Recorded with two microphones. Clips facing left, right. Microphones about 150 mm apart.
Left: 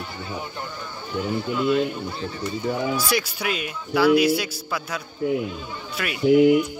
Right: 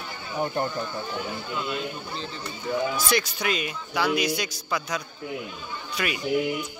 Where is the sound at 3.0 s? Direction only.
10° left (ahead or behind).